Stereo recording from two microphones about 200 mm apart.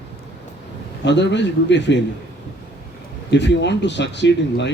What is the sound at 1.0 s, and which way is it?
Speech, 60° left (ahead or behind).